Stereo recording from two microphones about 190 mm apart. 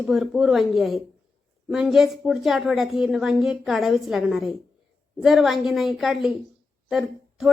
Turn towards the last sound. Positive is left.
turn(degrees=0)  # may be behind; listen again after turning